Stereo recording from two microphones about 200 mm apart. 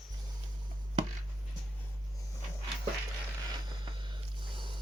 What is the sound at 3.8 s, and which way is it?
Snort, 25° right (ahead or behind).